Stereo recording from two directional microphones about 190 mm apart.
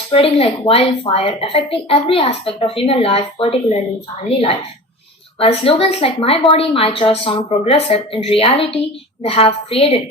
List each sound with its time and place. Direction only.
0.1 s a woman's voice: 30° left (ahead or behind)